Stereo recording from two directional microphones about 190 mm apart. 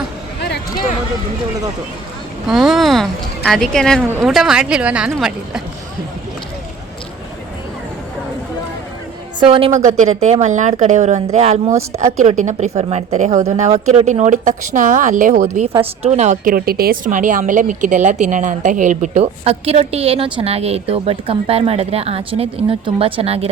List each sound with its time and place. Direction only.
2.5 s speech: centre (ahead or behind)
9.4 s a woman's voice: 30° right (ahead or behind); by 15.6 s 45° right (ahead or behind)
15.6 s a woman's voice: 30° right (ahead or behind)